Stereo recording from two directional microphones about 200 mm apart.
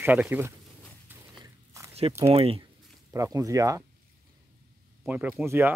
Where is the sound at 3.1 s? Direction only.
15° right (ahead or behind).